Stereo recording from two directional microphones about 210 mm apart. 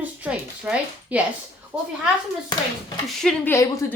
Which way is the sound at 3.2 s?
10° left (ahead or behind).